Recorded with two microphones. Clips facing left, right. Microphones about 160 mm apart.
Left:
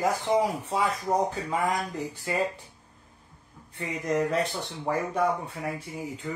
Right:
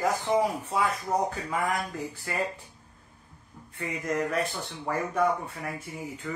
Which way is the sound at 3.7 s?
25° left (ahead or behind).